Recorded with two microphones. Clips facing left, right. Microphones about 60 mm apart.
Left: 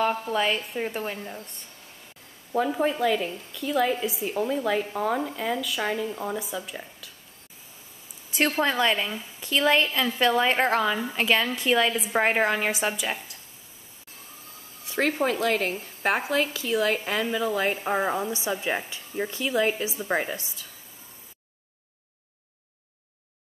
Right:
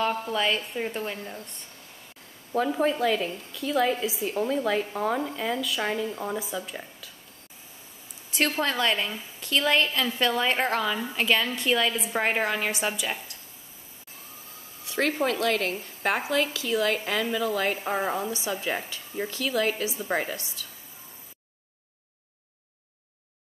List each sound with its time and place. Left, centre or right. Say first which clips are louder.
0.3 s speech: left 1 dB; centre
8.4 s a woman's voice: left 2 dB; centre
14.9 s a sound: left 1 dB; left
15.2 s a woman's voice: left 1 dB; left
18.3 s a woman's voice: left 2 dB; left